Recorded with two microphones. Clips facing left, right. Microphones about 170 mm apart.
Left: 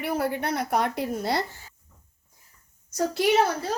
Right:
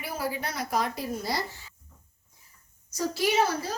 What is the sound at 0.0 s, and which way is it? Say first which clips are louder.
A woman's voice: left 6 dB; 65° left (ahead or behind).